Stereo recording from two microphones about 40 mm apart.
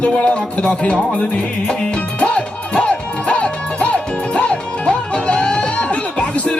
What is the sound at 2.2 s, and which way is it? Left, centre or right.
Music, left.